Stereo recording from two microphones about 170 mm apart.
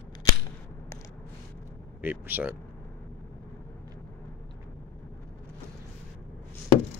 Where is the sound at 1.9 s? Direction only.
10° right (ahead or behind).